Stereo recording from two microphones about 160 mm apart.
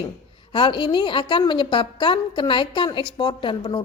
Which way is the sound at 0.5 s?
30° left (ahead or behind).